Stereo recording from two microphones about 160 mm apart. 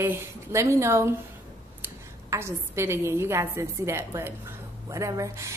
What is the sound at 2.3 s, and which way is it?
A woman's voice, 15° right (ahead or behind).